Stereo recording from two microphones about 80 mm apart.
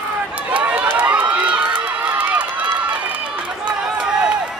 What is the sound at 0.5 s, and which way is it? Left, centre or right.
Run, centre.